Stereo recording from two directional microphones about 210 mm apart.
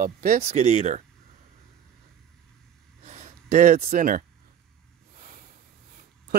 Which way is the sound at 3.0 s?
35° right (ahead or behind).